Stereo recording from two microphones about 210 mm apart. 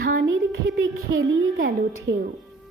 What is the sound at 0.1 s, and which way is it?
A woman's voice, 65° right (ahead or behind).